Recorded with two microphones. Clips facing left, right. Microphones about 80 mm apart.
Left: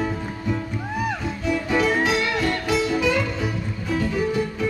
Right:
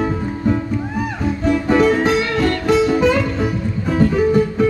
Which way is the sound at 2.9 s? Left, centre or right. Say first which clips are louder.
Right 6 dB; right.